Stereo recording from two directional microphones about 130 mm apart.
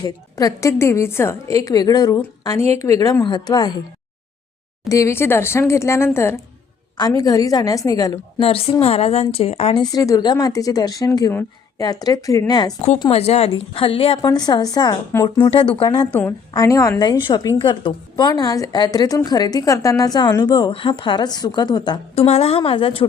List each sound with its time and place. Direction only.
0.0 s a woman's voice: 30° left (ahead or behind)
4.9 s a woman's voice: 25° left (ahead or behind)
8.4 s a woman's voice: 45° left (ahead or behind)
9.7 s a woman's voice: 30° left (ahead or behind)
13.1 s a woman's voice: 50° left (ahead or behind)
14.3 s a woman's voice: 30° left (ahead or behind)
16.6 s a woman's voice: 25° left (ahead or behind)
17.0 s a woman's voice: 35° left (ahead or behind)
22.1 s a woman's voice: 55° left (ahead or behind)